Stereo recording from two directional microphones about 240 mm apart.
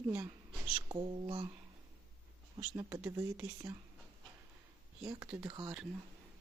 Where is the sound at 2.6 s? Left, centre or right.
Centre.